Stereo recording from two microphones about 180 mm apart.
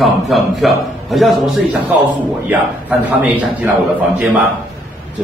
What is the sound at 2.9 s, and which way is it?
A man's voice, 10° right (ahead or behind).